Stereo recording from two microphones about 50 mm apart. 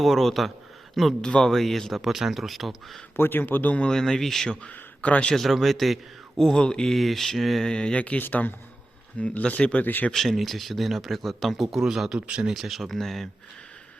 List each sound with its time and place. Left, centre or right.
0.0 s speech: centre
1.2 s speech: centre
3.2 s speech: left
3.9 s speech: centre
4.7 s speech: left
5.3 s speech: centre
6.9 s speech: centre
7.6 s speech: centre
8.2 s speech: left
9.1 s speech: left
9.8 s speech: left
10.1 s speech: centre
12.5 s speech: centre